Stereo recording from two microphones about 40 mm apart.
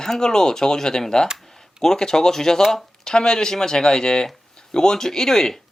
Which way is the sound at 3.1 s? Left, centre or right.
Centre.